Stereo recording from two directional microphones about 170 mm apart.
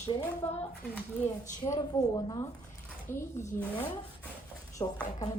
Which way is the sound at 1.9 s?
25° left (ahead or behind).